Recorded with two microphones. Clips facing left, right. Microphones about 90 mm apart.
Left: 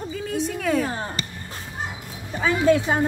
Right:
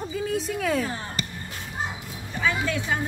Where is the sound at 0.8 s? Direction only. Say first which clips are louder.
Left 3 dB; 35° left (ahead or behind).